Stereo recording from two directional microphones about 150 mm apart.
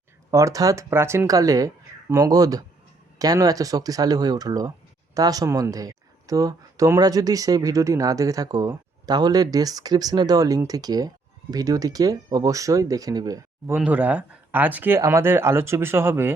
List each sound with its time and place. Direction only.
0.3 s speech: 20° right (ahead or behind)
13.7 s speech: 10° right (ahead or behind)